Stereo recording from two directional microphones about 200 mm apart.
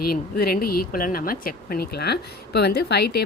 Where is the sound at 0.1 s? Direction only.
50° left (ahead or behind).